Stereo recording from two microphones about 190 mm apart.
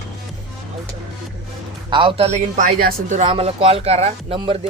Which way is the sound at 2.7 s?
55° right (ahead or behind).